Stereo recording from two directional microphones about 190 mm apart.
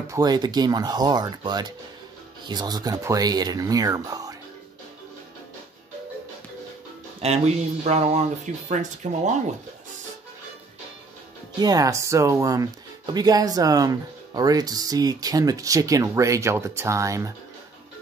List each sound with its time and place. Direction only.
0.1 s speech: 20° right (ahead or behind)
7.2 s speech: 35° right (ahead or behind)
11.6 s speech: 20° right (ahead or behind)